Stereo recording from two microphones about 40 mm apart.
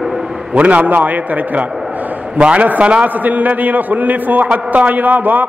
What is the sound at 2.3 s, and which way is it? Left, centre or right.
A man's voice, right.